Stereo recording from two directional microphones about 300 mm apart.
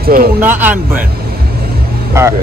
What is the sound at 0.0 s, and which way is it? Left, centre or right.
Speech, right.